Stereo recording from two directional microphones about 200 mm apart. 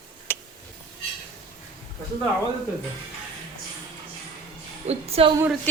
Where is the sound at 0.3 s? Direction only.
10° left (ahead or behind).